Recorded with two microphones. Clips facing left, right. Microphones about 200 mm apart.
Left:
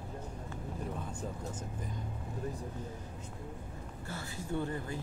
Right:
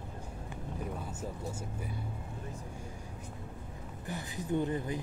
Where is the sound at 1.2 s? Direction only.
10° right (ahead or behind).